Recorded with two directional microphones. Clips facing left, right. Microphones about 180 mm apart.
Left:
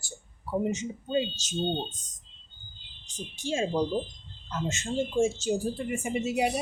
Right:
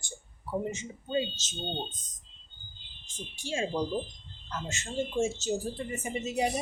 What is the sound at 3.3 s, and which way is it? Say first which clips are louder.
Speech: left 4 dB; 20° left (ahead or behind).